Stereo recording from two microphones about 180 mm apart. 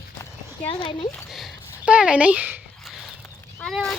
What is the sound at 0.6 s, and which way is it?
Speech, 30° left (ahead or behind).